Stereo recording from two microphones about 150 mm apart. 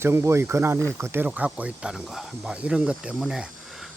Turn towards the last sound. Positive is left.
turn(degrees=-5)  # may be behind; listen again after turning